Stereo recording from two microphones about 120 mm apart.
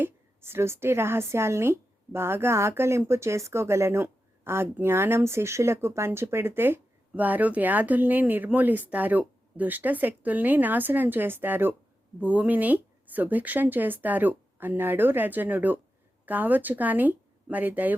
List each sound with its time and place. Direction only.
0.0 s speech: 20° right (ahead or behind)